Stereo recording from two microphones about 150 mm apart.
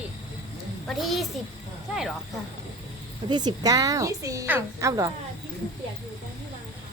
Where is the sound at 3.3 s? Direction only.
30° right (ahead or behind).